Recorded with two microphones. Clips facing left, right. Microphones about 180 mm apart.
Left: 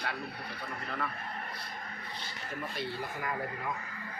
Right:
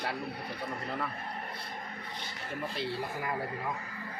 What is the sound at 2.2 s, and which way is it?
Speech, 30° right (ahead or behind).